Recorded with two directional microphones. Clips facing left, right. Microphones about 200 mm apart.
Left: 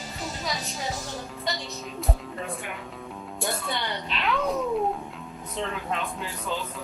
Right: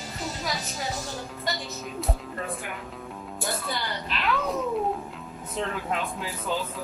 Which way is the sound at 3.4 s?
Centre (ahead or behind).